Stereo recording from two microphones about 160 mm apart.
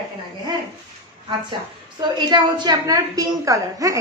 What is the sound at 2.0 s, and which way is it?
A woman's voice, 30° right (ahead or behind).